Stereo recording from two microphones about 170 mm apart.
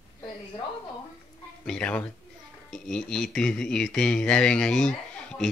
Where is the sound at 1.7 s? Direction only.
5° left (ahead or behind).